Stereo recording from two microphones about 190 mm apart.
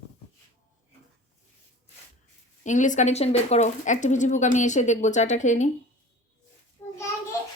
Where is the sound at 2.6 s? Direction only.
40° left (ahead or behind).